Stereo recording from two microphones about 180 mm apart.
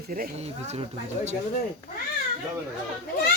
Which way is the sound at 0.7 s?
40° right (ahead or behind).